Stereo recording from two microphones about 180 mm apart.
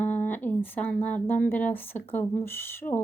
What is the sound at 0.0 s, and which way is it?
Speech, 10° left (ahead or behind).